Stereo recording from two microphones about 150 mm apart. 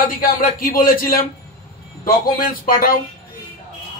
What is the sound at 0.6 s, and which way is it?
Speech, 70° left (ahead or behind).